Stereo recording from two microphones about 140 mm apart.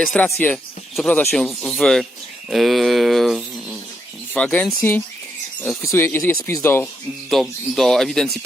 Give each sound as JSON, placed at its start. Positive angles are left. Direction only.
{"t": 0.3, "sound": "speech", "side_deg": 15}
{"t": 4.4, "sound": "speech", "side_deg": 10}
{"t": 7.3, "sound": "speech", "side_deg": 0}